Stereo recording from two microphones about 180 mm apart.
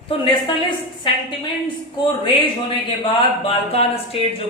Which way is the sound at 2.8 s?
30° left (ahead or behind).